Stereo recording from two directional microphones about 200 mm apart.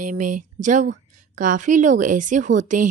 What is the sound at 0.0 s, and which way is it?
A woman's voice, 40° right (ahead or behind).